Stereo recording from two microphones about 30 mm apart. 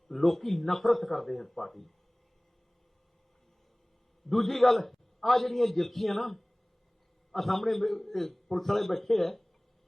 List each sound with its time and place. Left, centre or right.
0.1 s a man's voice: centre
4.3 s a man's voice: centre